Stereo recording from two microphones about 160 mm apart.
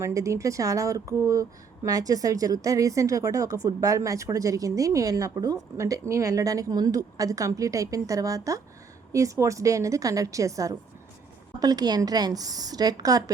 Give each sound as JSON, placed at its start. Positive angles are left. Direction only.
{"t": 0.0, "sound": "speech", "side_deg": -20}